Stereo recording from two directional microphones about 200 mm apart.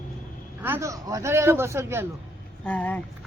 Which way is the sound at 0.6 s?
10° right (ahead or behind).